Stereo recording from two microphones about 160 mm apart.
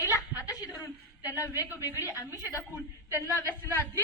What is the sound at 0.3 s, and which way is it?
Chuckle, 25° left (ahead or behind).